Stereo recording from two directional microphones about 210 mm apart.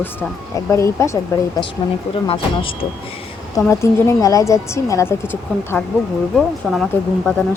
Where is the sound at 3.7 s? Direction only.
15° left (ahead or behind).